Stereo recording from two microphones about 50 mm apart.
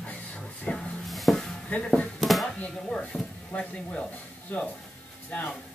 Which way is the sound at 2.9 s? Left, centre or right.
Centre.